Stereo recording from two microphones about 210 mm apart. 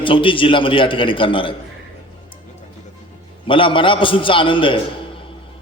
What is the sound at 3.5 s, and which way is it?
A man's voice, 25° left (ahead or behind).